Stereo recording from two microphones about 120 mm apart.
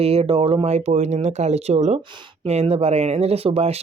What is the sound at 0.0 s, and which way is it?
Speech, 55° right (ahead or behind).